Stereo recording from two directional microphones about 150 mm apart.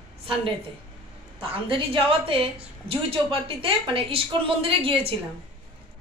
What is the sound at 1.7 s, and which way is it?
A woman's voice, 35° right (ahead or behind).